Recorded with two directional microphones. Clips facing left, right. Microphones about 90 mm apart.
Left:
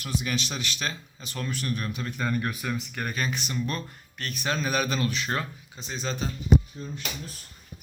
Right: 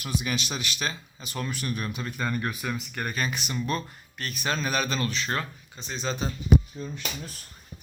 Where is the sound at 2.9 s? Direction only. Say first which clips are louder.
Even; centre (ahead or behind).